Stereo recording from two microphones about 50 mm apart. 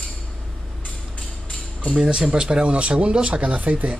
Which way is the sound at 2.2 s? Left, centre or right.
Centre.